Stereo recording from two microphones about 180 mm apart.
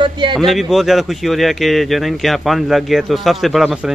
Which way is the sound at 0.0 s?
25° right (ahead or behind).